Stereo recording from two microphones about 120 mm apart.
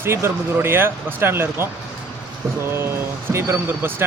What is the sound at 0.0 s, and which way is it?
Speech, 20° right (ahead or behind).